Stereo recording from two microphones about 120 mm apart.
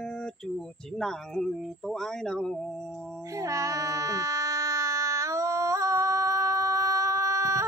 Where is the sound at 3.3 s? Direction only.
25° right (ahead or behind).